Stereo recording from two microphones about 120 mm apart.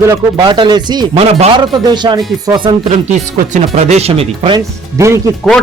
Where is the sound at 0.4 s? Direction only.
40° right (ahead or behind).